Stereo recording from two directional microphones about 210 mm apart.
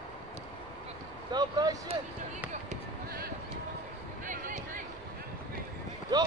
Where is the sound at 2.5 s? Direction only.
40° right (ahead or behind).